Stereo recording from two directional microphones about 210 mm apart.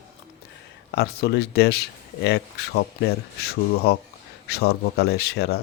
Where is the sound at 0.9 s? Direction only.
50° left (ahead or behind).